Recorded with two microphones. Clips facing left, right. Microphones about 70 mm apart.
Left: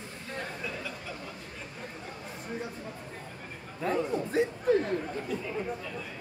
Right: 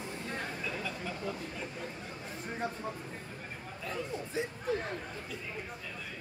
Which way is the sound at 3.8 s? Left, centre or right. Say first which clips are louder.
Left 9 dB; left.